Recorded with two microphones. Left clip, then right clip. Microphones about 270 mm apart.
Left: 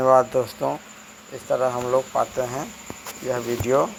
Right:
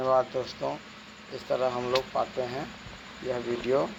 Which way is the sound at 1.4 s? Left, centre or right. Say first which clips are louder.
Left 6 dB; centre.